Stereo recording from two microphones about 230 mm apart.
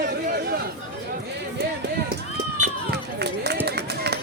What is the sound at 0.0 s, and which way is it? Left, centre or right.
Chatter, right.